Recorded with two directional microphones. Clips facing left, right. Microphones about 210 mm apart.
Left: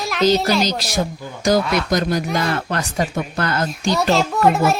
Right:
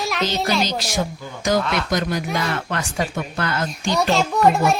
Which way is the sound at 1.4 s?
35° left (ahead or behind).